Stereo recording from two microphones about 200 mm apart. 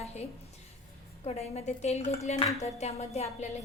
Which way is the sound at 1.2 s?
30° left (ahead or behind).